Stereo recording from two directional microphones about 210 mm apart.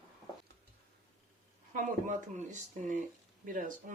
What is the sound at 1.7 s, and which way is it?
Speech, 35° right (ahead or behind).